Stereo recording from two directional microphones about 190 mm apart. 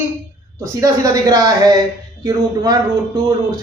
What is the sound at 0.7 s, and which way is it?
A man's voice, 20° right (ahead or behind).